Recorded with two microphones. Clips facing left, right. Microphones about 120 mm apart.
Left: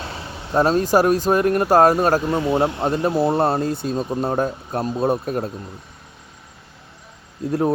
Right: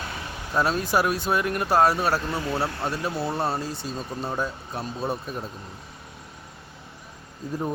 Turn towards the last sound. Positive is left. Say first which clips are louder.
# left 9 dB
turn(degrees=75)  # may be behind; listen again after turning